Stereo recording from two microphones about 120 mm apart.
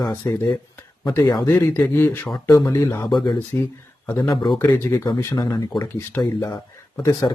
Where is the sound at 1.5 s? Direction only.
20° left (ahead or behind).